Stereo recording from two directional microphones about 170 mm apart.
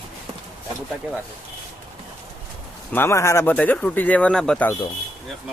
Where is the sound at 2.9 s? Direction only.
15° left (ahead or behind).